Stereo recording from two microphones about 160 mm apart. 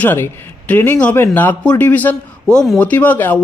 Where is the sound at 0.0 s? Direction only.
15° left (ahead or behind).